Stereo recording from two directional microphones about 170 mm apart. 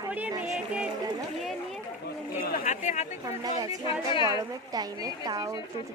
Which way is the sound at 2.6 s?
45° left (ahead or behind).